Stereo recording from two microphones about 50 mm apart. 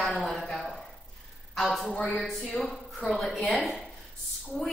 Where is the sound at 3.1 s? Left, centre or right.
Centre.